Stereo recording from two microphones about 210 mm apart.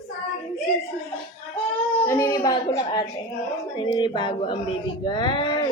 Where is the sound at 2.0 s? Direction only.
15° left (ahead or behind).